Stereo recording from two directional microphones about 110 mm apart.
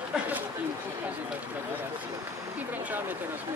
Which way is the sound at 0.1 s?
5° right (ahead or behind).